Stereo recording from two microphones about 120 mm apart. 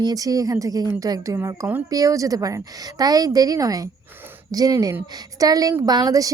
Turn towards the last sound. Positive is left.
turn(degrees=-30)  # may be behind; listen again after turning